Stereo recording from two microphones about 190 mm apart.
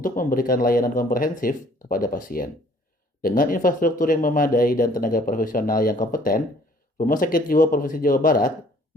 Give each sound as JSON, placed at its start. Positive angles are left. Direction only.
{"t": 0.0, "sound": "speech", "side_deg": 45}